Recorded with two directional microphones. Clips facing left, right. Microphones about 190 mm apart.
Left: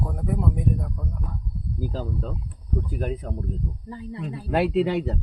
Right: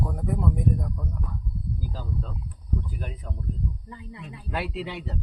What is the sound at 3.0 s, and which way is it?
Speech, 45° left (ahead or behind).